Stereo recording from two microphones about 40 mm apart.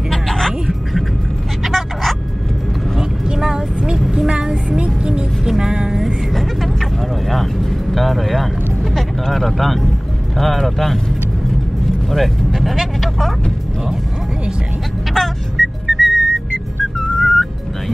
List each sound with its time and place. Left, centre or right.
0.1 s music: centre
1.6 s vehicle: centre
3.3 s vehicle: centre
4.3 s music: right
5.6 s vehicle: centre
6.3 s vehicle: centre
8.9 s music: centre
10.3 s a sound: centre
10.6 s vehicle: centre
12.1 s vehicle: centre
15.1 s music: centre